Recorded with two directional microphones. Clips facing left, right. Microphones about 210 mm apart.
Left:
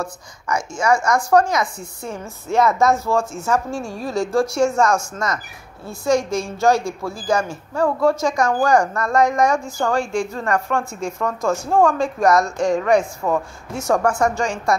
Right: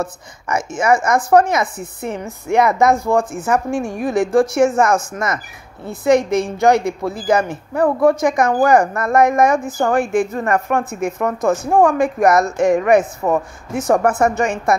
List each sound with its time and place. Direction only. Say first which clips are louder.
0.0 s a woman's voice: right 4 dB; 20° right (ahead or behind)